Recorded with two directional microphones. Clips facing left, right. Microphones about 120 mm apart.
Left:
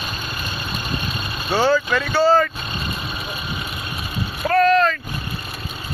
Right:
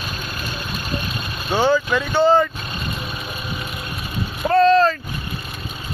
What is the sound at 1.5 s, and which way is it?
Vehicle, 15° right (ahead or behind).